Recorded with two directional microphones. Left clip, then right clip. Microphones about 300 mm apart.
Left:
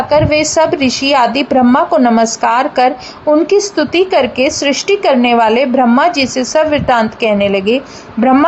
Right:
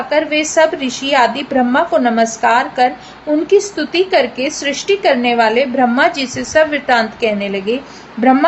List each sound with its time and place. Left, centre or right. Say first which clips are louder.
0.1 s a woman's voice: left 3 dB; left